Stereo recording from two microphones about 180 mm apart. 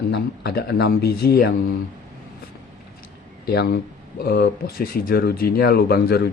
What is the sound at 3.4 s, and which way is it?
Speech, 60° left (ahead or behind).